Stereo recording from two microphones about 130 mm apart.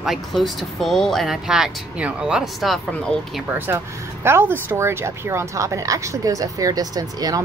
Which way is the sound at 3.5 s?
15° right (ahead or behind).